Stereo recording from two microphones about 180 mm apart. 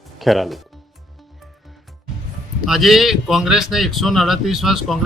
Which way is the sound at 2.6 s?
Centre (ahead or behind).